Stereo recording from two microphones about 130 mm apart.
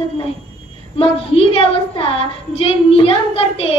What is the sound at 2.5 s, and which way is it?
Child singing, 45° left (ahead or behind).